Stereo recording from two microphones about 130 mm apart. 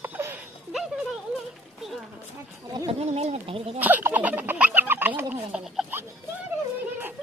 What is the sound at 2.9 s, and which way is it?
Speech, 50° right (ahead or behind).